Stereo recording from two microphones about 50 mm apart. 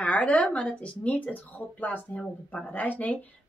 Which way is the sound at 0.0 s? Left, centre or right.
Left.